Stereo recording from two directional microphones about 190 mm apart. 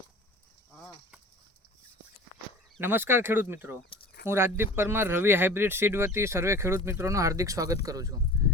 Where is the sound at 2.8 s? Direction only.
10° right (ahead or behind).